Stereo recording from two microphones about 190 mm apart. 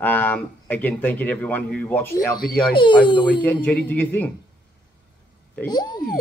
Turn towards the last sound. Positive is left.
turn(degrees=20)  # may be behind; listen again after turning